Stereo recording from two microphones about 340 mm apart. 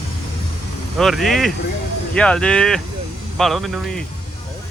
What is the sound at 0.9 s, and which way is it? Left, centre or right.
Vehicle, centre.